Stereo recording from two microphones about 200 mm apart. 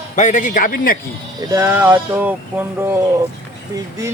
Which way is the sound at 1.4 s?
15° right (ahead or behind).